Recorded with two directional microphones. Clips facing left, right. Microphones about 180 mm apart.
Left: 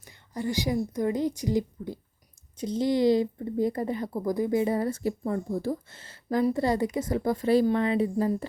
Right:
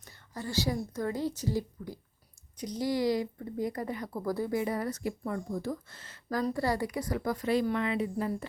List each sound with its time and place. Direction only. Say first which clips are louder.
0.0 s a woman's voice: left 7 dB; 15° left (ahead or behind); by 8.3 s 30° left (ahead or behind)